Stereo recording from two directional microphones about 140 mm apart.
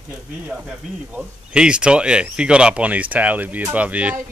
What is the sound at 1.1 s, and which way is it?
Speech, 5° right (ahead or behind).